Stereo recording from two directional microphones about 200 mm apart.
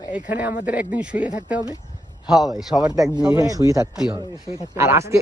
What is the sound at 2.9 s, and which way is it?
A man's voice, 20° right (ahead or behind).